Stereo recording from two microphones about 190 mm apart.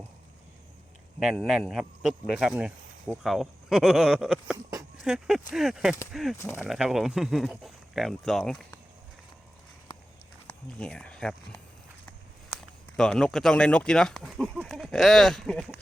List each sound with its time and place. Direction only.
1.2 s speech: 5° right (ahead or behind)
4.5 s a sound: 20° right (ahead or behind)
5.0 s speech: 5° right (ahead or behind)
6.3 s speech: 15° left (ahead or behind)
6.6 s speech: 5° right (ahead or behind)
10.4 s speech: 5° left (ahead or behind)
13.0 s speech: 5° left (ahead or behind)